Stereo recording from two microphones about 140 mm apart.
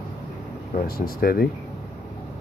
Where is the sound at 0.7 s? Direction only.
85° left.